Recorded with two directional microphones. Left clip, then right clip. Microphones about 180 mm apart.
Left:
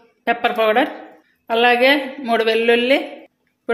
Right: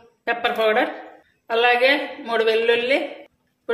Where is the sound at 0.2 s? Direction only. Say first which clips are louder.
Left 3 dB; 45° left (ahead or behind).